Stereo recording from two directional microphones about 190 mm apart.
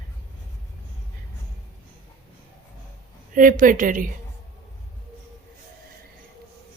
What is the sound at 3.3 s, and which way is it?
Speech, 45° right (ahead or behind).